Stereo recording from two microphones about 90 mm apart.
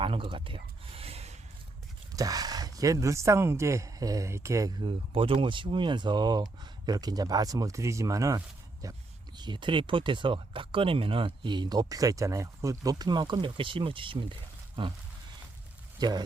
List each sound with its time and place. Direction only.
0.0 s speech: 75° right (ahead or behind)
2.1 s speech: 40° right (ahead or behind)
4.8 s speech: 75° right (ahead or behind); by 9.0 s 40° right (ahead or behind)
9.4 s speech: 60° right (ahead or behind)
16.0 s speech: 50° right (ahead or behind)